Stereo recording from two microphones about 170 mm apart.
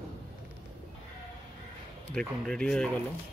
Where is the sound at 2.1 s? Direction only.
5° left (ahead or behind).